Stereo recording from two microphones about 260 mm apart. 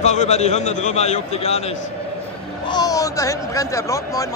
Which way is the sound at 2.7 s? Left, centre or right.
Centre.